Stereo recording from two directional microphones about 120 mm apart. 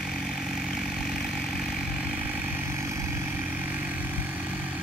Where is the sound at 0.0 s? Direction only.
Centre (ahead or behind).